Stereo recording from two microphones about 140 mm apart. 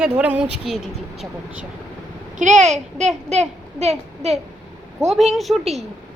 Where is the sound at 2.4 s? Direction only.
60° right (ahead or behind).